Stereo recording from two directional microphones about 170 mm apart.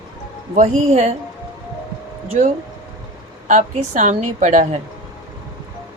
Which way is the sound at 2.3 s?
45° right (ahead or behind).